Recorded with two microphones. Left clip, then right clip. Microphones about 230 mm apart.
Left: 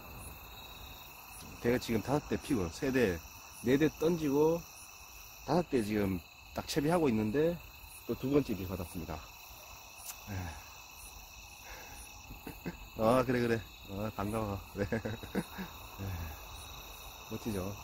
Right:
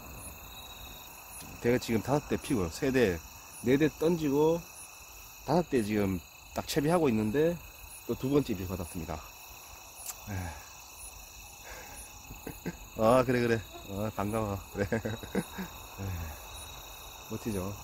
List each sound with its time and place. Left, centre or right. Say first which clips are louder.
1.6 s speech: right 3 dB; right
5.5 s speech: right 3 dB; centre
12.6 s speech: right 4 dB; right
17.5 s speech: right 3 dB; centre